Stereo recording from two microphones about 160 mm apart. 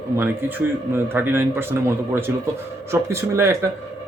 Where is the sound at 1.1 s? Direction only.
15° right (ahead or behind).